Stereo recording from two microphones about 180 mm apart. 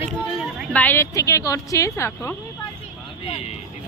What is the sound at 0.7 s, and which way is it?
A woman's voice, 10° left (ahead or behind).